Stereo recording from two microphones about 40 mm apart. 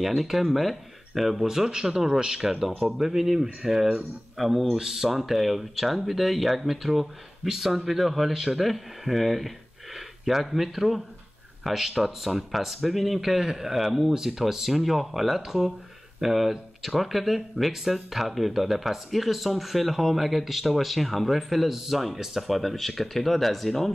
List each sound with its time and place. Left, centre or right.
0.0 s speech: centre